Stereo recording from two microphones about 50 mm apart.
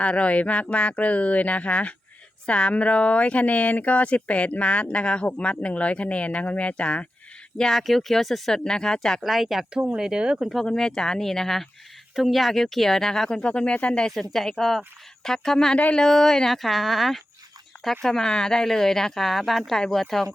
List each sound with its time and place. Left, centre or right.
0.0 s speech: left
7.6 s speech: centre
9.2 s speech: centre
10.0 s speech: centre
10.7 s speech: centre
14.1 s speech: centre